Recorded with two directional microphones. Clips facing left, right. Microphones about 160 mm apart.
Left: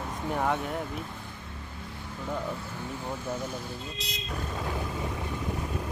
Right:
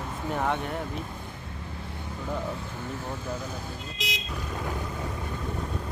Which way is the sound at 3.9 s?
90° right.